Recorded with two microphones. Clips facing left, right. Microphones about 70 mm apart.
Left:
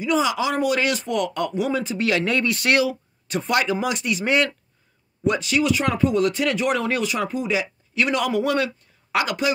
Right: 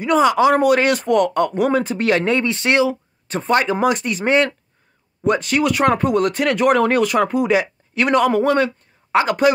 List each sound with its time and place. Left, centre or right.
0.0 s speech: right
2.2 s speech: right